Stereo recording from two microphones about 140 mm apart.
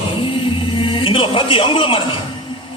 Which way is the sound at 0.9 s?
40° left (ahead or behind).